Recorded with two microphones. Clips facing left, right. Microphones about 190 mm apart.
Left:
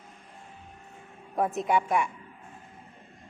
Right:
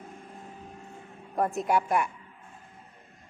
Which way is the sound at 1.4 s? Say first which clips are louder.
Even; centre (ahead or behind).